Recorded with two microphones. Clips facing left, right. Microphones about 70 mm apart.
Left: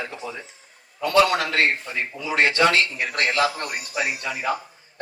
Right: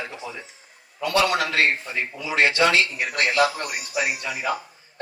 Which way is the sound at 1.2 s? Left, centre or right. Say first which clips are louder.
Even; right.